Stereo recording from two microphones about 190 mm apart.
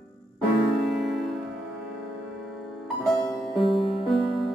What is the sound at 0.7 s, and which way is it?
Music, centre (ahead or behind).